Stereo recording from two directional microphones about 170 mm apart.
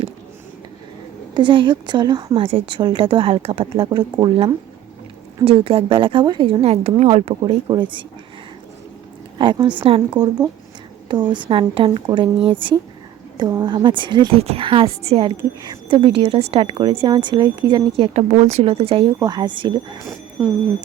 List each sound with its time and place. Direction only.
1.3 s a woman's voice: 30° right (ahead or behind)
9.4 s a woman's voice: 30° right (ahead or behind)